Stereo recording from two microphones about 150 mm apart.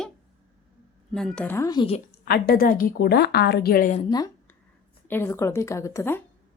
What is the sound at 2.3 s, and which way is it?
A woman's voice, 90° left.